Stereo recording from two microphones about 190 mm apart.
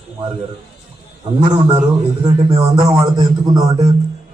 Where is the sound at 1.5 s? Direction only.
25° right (ahead or behind).